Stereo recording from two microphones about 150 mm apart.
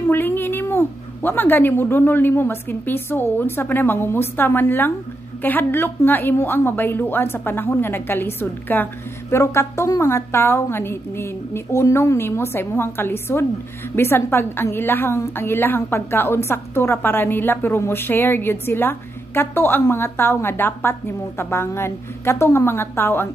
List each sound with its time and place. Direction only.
0.1 s a woman's voice: 15° left (ahead or behind)